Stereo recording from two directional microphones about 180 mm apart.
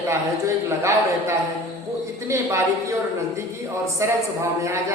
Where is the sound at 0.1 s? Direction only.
15° right (ahead or behind).